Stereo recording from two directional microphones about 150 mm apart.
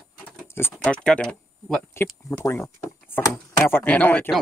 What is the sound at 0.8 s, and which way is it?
Speech, 5° left (ahead or behind).